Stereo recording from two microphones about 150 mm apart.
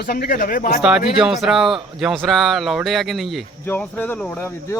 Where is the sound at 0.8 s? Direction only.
5° right (ahead or behind).